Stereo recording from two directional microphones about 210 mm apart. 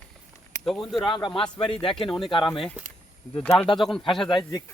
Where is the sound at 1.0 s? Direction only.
20° left (ahead or behind).